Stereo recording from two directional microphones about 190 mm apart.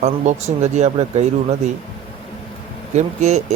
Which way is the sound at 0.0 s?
35° right (ahead or behind).